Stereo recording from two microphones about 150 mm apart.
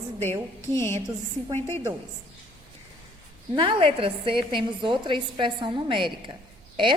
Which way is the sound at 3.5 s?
35° right (ahead or behind).